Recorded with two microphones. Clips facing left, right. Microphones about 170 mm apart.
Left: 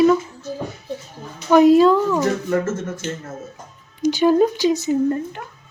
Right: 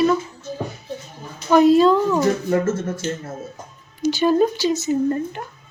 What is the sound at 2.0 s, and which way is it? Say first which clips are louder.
Speech: even; 10° right (ahead or behind).